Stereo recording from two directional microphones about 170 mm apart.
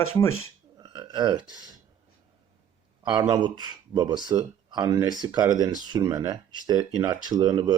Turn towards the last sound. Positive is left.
turn(degrees=-25)  # may be behind; listen again after turning